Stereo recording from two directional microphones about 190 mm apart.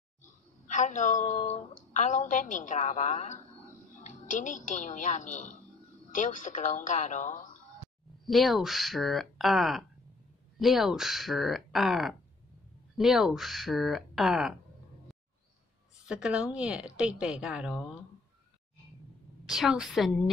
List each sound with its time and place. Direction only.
0.2 s a woman's voice: 40° left (ahead or behind)
8.3 s speech: centre (ahead or behind)
16.1 s speech: 5° right (ahead or behind)
19.4 s speech: centre (ahead or behind)